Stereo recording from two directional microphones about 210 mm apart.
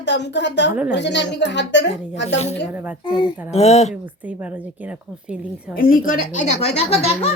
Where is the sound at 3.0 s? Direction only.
20° left (ahead or behind).